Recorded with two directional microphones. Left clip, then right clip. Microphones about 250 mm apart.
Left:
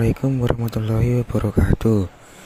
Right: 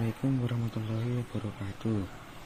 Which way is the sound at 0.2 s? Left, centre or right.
Left.